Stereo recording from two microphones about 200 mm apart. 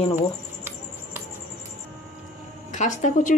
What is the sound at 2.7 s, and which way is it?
Speech, 40° left (ahead or behind).